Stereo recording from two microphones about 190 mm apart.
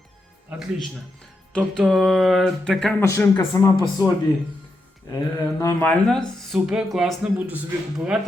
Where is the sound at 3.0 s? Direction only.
15° left (ahead or behind).